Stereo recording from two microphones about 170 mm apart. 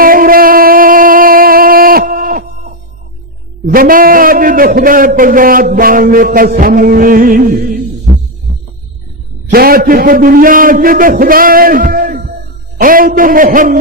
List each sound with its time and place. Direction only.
0.0 s a sound: 55° right (ahead or behind)
3.7 s a man's voice: 55° right (ahead or behind)
9.5 s a man's voice: 60° right (ahead or behind)